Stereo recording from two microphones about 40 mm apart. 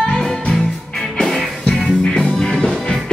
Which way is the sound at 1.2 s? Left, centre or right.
Centre.